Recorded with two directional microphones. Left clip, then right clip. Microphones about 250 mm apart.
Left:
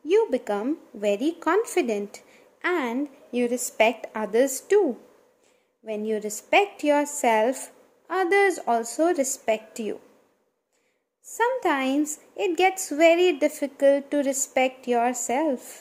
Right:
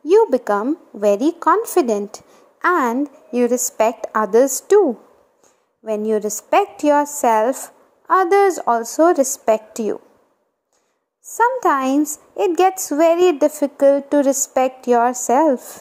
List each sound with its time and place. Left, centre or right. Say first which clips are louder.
0.0 s a sound: right 8 dB; centre
1.0 s a woman's voice: right 9 dB; centre
11.3 s a woman's voice: right 8 dB; centre